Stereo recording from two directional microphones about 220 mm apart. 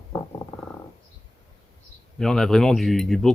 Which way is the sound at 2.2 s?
Centre (ahead or behind).